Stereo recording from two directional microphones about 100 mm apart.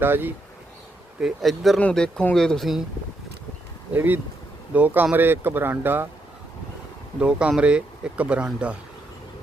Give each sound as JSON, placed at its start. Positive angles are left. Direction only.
{"t": 0.0, "sound": "speech", "side_deg": -20}
{"t": 1.2, "sound": "speech", "side_deg": 0}
{"t": 3.9, "sound": "speech", "side_deg": -20}
{"t": 7.2, "sound": "speech", "side_deg": -10}